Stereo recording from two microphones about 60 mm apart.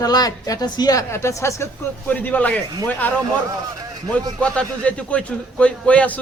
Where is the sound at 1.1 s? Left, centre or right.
Left.